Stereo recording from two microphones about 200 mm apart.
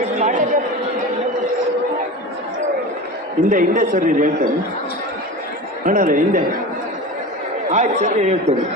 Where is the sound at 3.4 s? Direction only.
40° right (ahead or behind).